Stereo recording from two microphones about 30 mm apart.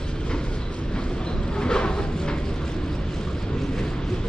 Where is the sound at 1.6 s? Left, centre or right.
Left.